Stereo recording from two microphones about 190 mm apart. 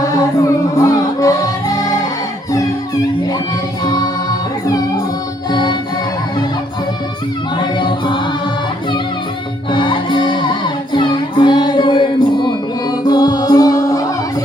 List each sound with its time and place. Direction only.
0.0 s music: 20° left (ahead or behind)
3.8 s music: 20° left (ahead or behind)
7.6 s a capella: 25° left (ahead or behind)
9.7 s music: 25° left (ahead or behind)